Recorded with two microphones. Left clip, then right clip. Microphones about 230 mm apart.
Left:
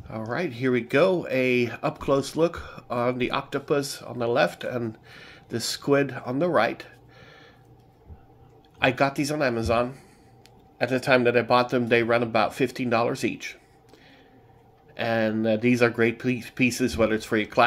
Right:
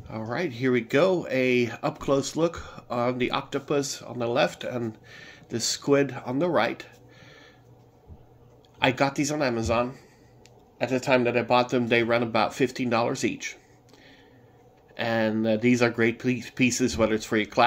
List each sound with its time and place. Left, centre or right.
0.1 s speech: centre
8.7 s speech: centre
15.0 s speech: centre